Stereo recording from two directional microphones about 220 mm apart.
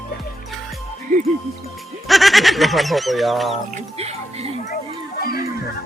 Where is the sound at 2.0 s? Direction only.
Centre (ahead or behind).